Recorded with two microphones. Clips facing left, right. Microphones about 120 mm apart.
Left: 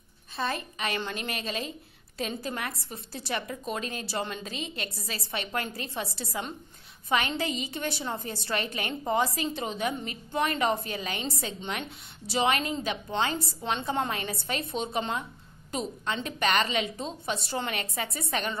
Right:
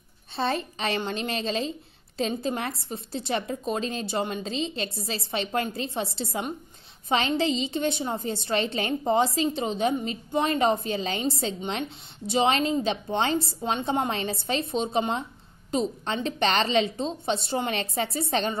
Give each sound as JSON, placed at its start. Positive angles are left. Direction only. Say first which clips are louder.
{"t": 0.4, "sound": "a woman's voice", "louder": "right 4 dB", "side_deg": -30}